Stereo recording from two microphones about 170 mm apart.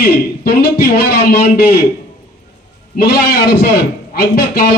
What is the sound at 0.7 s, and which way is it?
A man's voice, 65° left (ahead or behind).